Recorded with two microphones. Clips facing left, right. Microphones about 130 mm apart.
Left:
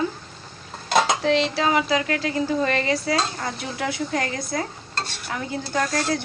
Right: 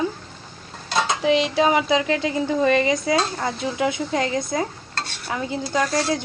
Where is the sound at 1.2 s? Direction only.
15° right (ahead or behind).